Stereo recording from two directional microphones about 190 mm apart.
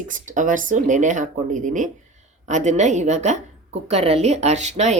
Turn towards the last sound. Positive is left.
turn(degrees=-35)  # may be behind; listen again after turning